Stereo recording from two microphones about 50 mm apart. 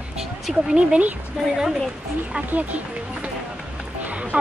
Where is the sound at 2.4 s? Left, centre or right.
Right.